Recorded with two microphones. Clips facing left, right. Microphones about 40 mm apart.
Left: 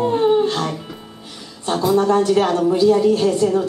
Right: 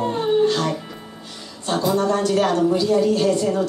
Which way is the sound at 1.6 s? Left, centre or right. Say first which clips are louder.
Left 3 dB; centre.